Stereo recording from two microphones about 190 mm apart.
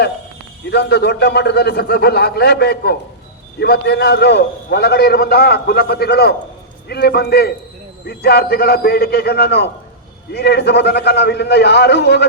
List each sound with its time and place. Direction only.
0.7 s a man's voice: 60° left (ahead or behind)